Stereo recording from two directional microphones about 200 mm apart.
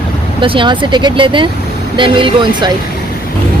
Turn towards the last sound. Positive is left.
turn(degrees=-25)  # may be behind; listen again after turning